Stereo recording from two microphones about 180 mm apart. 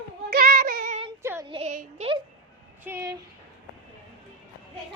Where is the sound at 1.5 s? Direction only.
30° right (ahead or behind).